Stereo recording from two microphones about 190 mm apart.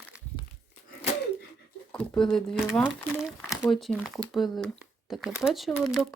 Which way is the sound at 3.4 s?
15° left (ahead or behind).